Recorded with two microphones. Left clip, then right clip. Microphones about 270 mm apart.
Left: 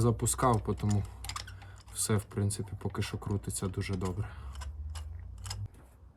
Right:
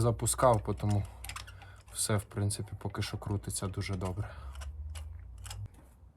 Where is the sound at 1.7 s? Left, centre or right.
Centre.